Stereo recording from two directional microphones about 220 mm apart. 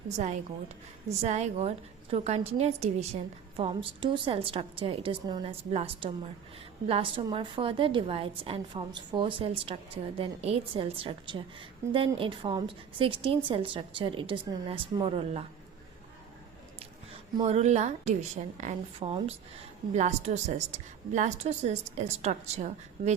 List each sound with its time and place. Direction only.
0.1 s a woman's voice: 30° right (ahead or behind)
17.4 s a woman's voice: 30° right (ahead or behind)